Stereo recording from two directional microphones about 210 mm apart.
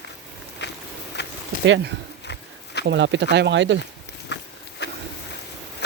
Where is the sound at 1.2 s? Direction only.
55° left (ahead or behind).